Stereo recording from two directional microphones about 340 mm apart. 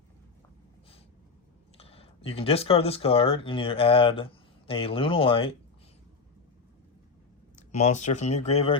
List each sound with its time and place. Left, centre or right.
1.8 s speech: centre
7.7 s speech: centre